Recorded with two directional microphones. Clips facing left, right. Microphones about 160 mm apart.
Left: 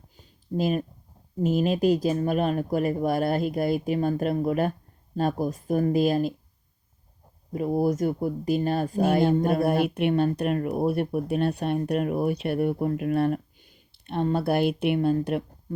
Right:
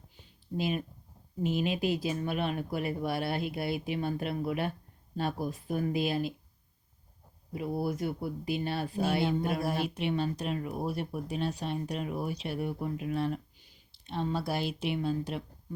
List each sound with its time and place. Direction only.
0.2 s a sound: 45° left (ahead or behind)
1.4 s speech: 45° left (ahead or behind)
7.5 s speech: 45° left (ahead or behind)